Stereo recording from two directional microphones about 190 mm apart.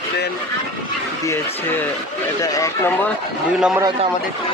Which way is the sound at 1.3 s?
10° left (ahead or behind).